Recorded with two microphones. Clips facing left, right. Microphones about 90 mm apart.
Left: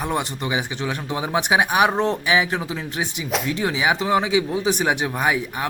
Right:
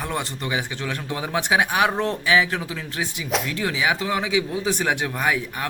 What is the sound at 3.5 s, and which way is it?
Speech, 20° left (ahead or behind).